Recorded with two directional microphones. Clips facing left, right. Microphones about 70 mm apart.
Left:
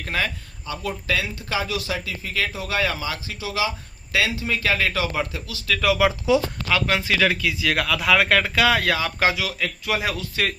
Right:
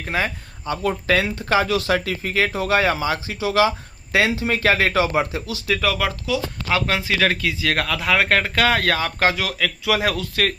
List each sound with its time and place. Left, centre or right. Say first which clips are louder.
0.1 s speech: right 2 dB; centre
0.7 s speech: right 6 dB; right
2.3 s a man's voice: right 6 dB; right
5.8 s speech: left 5 dB; centre
6.7 s a man's voice: right 2 dB; right
7.9 s speech: left 1 dB; right
8.5 s speech: right 1 dB; right